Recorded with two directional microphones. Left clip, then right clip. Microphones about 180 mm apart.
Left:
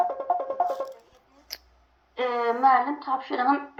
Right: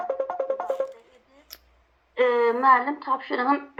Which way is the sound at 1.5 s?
30° right (ahead or behind).